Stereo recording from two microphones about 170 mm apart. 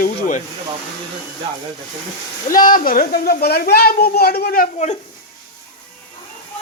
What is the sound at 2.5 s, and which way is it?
Speech, 55° left (ahead or behind).